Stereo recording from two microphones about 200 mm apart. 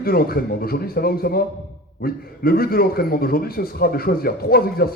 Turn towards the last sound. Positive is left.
turn(degrees=50)  # may be behind; listen again after turning